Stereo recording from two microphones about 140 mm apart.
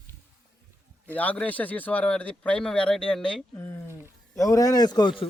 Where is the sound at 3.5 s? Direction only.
20° left (ahead or behind).